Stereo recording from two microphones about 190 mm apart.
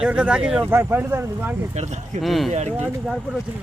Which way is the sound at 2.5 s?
35° right (ahead or behind).